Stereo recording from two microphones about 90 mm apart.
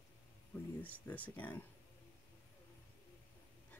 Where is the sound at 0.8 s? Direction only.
15° left (ahead or behind).